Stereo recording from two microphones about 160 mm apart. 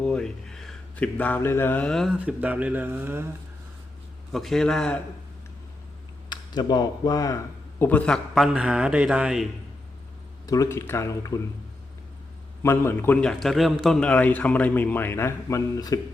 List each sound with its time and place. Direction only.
0.0 s speech: 5° left (ahead or behind); by 3.2 s 15° right (ahead or behind)
4.3 s speech: centre (ahead or behind)
6.2 s a man's voice: 25° left (ahead or behind); by 9.5 s 5° right (ahead or behind)
10.4 s speech: 20° left (ahead or behind)
12.6 s a man's voice: 15° left (ahead or behind)